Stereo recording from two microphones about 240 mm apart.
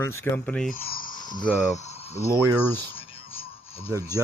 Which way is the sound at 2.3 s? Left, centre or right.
Centre.